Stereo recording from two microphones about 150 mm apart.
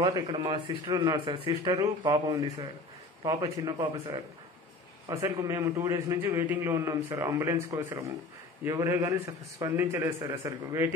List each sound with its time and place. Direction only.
0.0 s a man's voice: 30° right (ahead or behind)
3.6 s a man's voice: 25° right (ahead or behind)